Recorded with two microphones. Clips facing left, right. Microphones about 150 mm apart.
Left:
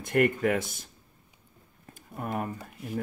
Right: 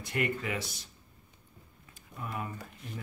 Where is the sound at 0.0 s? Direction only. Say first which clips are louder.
Left 9 dB; 50° left (ahead or behind).